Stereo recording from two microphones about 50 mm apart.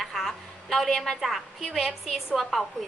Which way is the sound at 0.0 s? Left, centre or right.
Centre.